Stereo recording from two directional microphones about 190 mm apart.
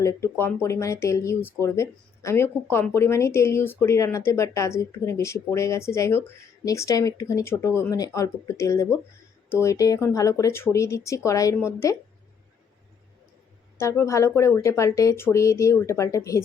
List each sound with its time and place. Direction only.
0.0 s speech: 15° left (ahead or behind)
13.7 s speech: 15° left (ahead or behind)